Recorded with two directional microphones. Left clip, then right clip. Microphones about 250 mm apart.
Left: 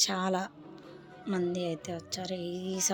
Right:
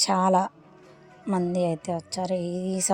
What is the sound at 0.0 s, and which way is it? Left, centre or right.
A woman's voice, right.